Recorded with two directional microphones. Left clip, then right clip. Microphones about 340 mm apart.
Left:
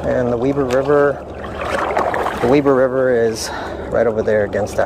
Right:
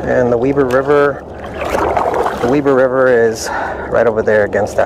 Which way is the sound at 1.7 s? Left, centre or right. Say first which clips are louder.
Right 4 dB; right.